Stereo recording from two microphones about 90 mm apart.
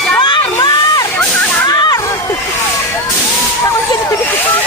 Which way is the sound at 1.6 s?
45° left (ahead or behind).